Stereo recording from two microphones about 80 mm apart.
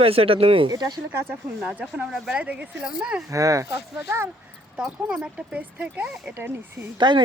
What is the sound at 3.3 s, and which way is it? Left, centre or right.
Speech, right.